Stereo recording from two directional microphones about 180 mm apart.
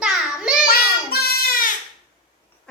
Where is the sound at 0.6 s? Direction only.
60° left (ahead or behind).